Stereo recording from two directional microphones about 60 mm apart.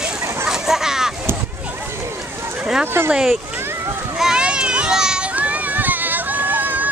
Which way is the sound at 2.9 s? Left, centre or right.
Right.